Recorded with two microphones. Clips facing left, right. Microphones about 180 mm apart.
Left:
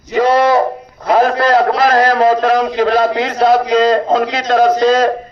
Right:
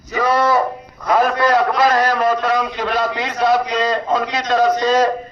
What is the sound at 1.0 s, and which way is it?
A man's voice, 30° left (ahead or behind).